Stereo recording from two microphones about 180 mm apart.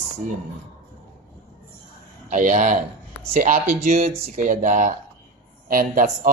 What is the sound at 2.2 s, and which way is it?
Speech, 45° right (ahead or behind).